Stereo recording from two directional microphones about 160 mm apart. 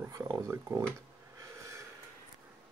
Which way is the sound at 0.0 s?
20° right (ahead or behind).